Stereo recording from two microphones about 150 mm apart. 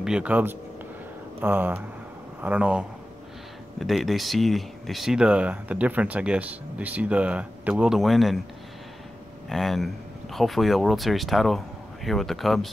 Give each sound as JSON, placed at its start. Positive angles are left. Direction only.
{"t": 0.0, "sound": "speech", "side_deg": -5}
{"t": 9.5, "sound": "speech", "side_deg": 0}